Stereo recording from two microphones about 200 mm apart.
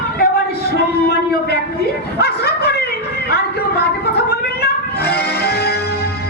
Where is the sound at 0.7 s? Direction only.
50° left (ahead or behind).